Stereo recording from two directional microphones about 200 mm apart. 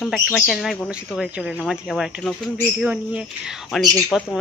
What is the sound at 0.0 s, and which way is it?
Speech, centre (ahead or behind).